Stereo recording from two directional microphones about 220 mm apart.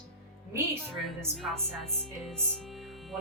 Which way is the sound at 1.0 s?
Centre (ahead or behind).